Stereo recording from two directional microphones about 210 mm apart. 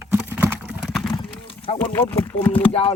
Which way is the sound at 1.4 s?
25° left (ahead or behind).